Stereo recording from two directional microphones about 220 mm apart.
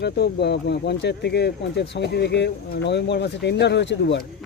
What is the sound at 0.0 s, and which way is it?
Speech, 50° left (ahead or behind).